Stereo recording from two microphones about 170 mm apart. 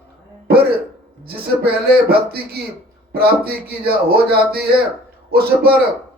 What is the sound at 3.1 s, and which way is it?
A man's voice, 65° right (ahead or behind).